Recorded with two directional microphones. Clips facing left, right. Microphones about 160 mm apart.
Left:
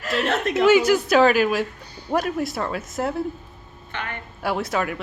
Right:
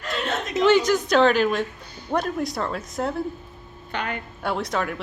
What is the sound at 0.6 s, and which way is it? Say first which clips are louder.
A woman's voice: left 1 dB; 10° left (ahead or behind).